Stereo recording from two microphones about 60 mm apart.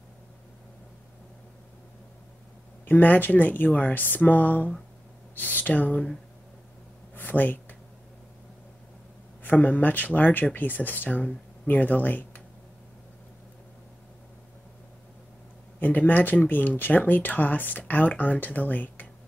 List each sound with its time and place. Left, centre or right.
2.9 s speech: left
7.2 s a sound: left
9.4 s speech: left
15.8 s speech: left